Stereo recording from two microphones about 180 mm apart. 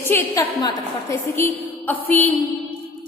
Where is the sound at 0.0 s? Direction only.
15° left (ahead or behind).